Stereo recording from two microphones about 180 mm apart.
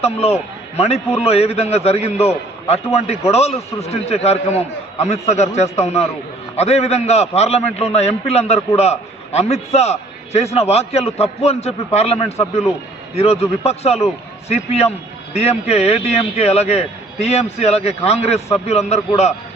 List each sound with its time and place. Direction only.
0.0 s a man's voice: 35° left (ahead or behind)